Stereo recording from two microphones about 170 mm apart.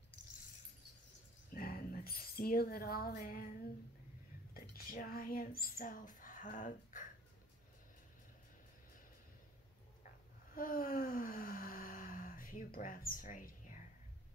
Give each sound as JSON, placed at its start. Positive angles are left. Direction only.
{"t": 1.5, "sound": "speech", "side_deg": 55}
{"t": 10.0, "sound": "gasp", "side_deg": 55}